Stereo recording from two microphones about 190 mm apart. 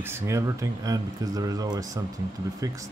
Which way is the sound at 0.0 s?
15° right (ahead or behind).